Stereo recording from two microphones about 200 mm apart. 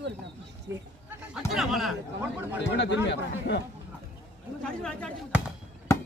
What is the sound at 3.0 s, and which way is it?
Speech, 60° left (ahead or behind).